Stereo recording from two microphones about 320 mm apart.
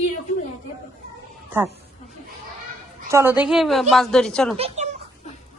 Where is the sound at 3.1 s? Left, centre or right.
Centre.